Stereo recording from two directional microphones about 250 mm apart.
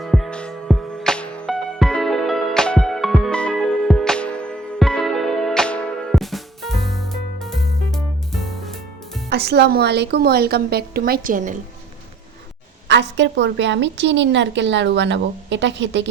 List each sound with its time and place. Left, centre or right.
0.0 s music: centre
9.3 s a woman's voice: right
12.9 s a woman's voice: right